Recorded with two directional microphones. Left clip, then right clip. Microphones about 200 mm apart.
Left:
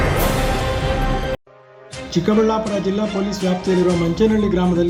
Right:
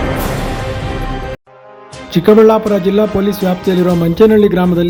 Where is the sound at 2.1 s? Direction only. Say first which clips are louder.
Right 10 dB; 35° right (ahead or behind).